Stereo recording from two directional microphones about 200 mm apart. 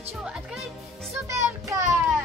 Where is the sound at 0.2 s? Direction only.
5° right (ahead or behind).